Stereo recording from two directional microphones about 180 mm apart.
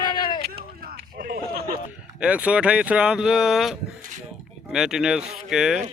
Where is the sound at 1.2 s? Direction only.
55° right (ahead or behind).